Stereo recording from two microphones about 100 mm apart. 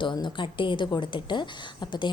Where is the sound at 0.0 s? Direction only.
55° left (ahead or behind).